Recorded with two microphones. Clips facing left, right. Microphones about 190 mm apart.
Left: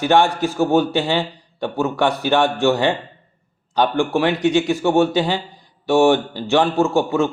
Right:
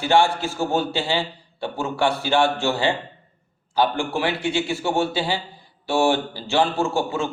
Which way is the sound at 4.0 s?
15° left (ahead or behind).